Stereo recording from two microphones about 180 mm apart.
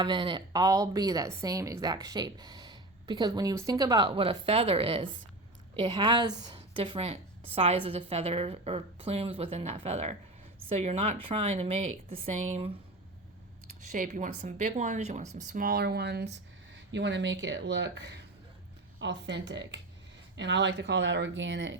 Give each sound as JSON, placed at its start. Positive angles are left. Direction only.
{"t": 0.0, "sound": "a woman's voice", "side_deg": -25}
{"t": 13.9, "sound": "a woman's voice", "side_deg": -45}
{"t": 16.9, "sound": "speech", "side_deg": -80}